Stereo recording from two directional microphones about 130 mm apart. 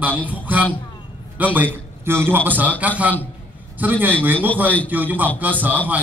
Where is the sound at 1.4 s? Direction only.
15° right (ahead or behind).